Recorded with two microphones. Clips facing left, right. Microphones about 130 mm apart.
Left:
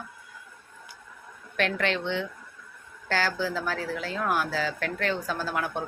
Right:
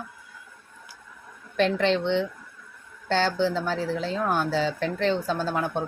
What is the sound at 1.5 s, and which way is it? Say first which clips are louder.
Speech: right 5 dB; 30° right (ahead or behind).